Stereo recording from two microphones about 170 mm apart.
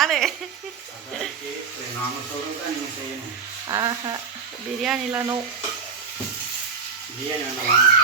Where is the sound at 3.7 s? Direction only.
25° right (ahead or behind).